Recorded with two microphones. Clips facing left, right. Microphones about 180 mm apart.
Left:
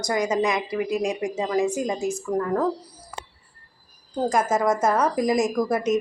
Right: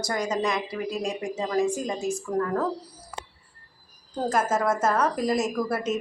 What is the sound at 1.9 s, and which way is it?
Speech, centre (ahead or behind).